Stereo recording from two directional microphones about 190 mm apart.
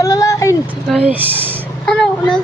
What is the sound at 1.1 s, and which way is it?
Speech, 10° right (ahead or behind).